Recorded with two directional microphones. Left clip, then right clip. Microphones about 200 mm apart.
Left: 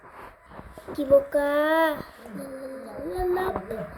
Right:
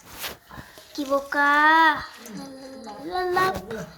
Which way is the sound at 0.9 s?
Centre (ahead or behind).